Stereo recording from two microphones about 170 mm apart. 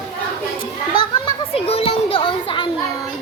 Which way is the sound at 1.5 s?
35° left (ahead or behind).